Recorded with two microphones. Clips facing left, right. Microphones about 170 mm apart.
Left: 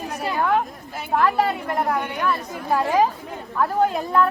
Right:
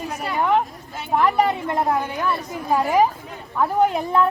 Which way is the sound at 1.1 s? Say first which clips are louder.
Right 1 dB; 15° right (ahead or behind).